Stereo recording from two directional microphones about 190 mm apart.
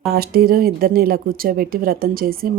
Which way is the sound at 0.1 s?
55° right (ahead or behind).